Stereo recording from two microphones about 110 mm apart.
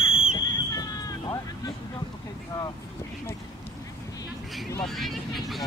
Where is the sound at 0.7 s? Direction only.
35° left (ahead or behind).